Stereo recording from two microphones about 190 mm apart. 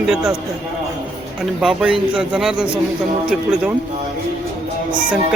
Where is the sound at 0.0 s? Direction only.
Centre (ahead or behind).